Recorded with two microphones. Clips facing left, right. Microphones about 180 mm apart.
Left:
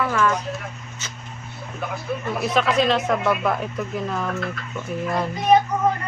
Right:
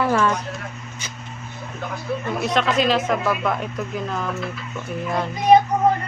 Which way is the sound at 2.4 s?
Centre (ahead or behind).